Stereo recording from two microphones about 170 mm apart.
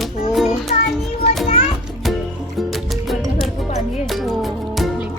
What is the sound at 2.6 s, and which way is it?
Music, centre (ahead or behind).